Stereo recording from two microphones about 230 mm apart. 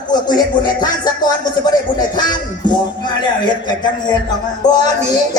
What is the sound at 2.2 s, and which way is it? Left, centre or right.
Music, centre.